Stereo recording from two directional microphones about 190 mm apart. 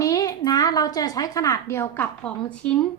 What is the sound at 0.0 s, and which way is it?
A woman's voice, 20° left (ahead or behind).